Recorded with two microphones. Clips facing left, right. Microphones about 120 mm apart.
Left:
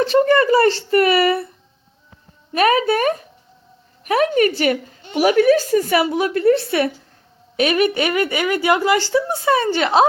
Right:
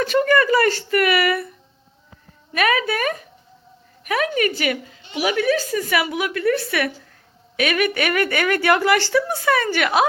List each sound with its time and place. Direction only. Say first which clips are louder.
0.0 s a woman's voice: left 3 dB; 30° left (ahead or behind)
2.5 s a woman's voice: left 5 dB; 35° left (ahead or behind)